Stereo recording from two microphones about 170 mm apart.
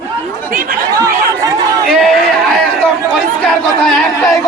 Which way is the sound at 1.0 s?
20° right (ahead or behind).